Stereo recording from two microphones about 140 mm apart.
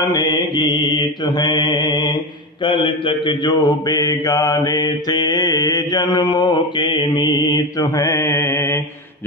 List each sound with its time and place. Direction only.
0.1 s mantra: 25° left (ahead or behind)